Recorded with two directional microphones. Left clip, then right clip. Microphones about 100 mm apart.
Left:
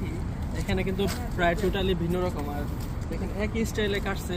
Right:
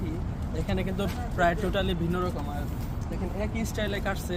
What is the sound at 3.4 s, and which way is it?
Speech, 45° right (ahead or behind).